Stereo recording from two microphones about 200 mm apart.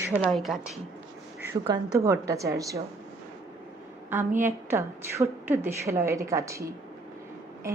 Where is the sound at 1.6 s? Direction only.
20° right (ahead or behind).